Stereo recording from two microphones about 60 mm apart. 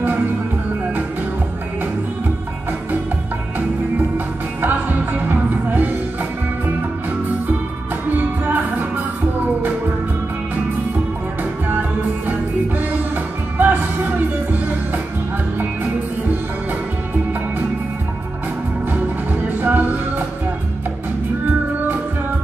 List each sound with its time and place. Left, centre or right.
4.6 s music: right
8.2 s music: right
12.3 s music: right
19.6 s music: right